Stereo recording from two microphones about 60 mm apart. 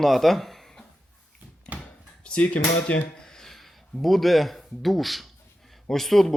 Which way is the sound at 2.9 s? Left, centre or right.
Left.